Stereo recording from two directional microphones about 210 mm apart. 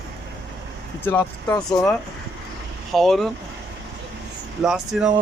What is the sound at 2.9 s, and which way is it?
Speech, centre (ahead or behind).